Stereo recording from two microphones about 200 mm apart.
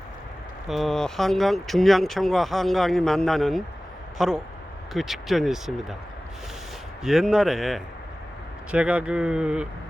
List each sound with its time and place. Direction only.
0.7 s speech: centre (ahead or behind)
7.0 s speech: centre (ahead or behind)